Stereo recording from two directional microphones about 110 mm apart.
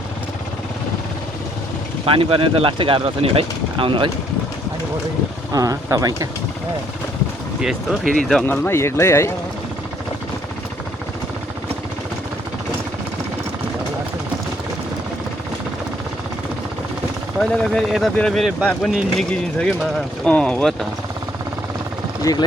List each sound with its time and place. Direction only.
2.0 s speech: 55° right (ahead or behind)
5.5 s speech: 30° right (ahead or behind)
7.6 s speech: 5° right (ahead or behind)
8.4 s speech: 20° left (ahead or behind)
17.4 s speech: 5° left (ahead or behind)
22.2 s speech: 35° left (ahead or behind)